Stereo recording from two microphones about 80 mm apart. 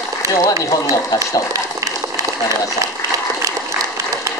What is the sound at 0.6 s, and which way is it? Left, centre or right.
Speech, left.